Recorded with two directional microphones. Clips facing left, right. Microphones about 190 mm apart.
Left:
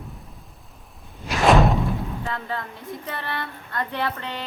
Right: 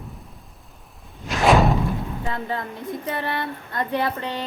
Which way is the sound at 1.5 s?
Centre (ahead or behind).